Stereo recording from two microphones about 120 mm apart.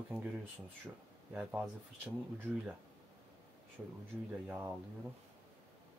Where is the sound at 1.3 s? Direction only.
15° right (ahead or behind).